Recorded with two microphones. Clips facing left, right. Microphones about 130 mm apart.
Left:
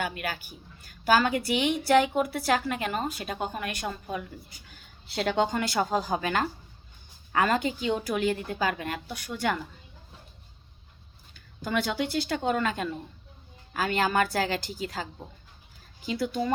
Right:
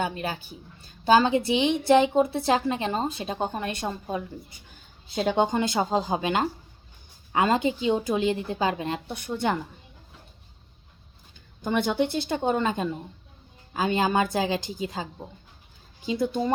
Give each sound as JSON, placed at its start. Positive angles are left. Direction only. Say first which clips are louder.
{"t": 0.0, "sound": "a woman's voice", "louder": "right 3 dB", "side_deg": -25}
{"t": 5.0, "sound": "a woman's voice", "louder": "right 3 dB", "side_deg": -15}
{"t": 11.3, "sound": "a woman's voice", "louder": "right 3 dB", "side_deg": -20}